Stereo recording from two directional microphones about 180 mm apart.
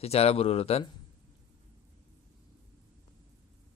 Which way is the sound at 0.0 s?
35° left (ahead or behind).